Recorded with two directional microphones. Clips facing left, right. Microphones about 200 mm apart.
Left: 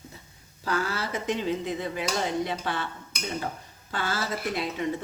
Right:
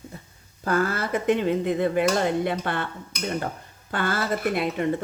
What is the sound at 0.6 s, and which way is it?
Speech, 50° right (ahead or behind).